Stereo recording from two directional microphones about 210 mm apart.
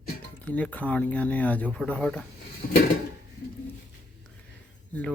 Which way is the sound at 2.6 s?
40° left (ahead or behind).